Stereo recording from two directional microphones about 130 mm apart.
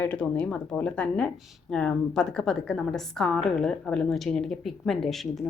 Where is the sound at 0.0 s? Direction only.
10° left (ahead or behind).